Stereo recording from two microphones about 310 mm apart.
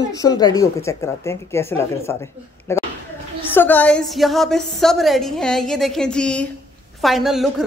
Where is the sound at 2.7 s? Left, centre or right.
Centre.